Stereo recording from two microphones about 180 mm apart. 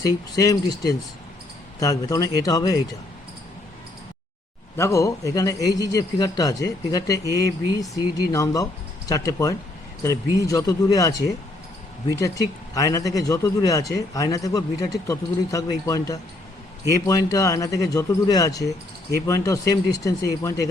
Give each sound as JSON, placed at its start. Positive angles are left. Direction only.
{"t": 0.0, "sound": "a man's voice", "side_deg": 20}
{"t": 4.8, "sound": "a man's voice", "side_deg": 15}
{"t": 12.7, "sound": "a man's voice", "side_deg": 20}